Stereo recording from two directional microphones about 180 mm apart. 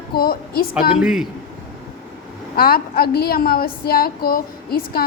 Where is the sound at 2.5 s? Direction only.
55° left (ahead or behind).